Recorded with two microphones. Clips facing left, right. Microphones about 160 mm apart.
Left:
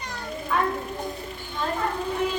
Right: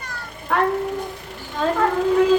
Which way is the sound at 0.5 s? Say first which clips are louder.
Right 5 dB; 70° right (ahead or behind).